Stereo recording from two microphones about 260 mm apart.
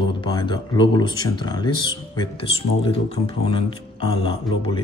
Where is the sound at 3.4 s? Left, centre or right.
Centre.